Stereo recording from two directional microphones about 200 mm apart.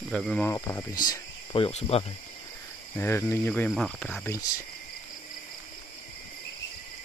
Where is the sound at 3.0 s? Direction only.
10° left (ahead or behind).